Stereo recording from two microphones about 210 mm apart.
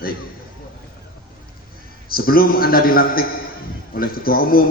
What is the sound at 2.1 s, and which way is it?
A man's voice, 45° left (ahead or behind).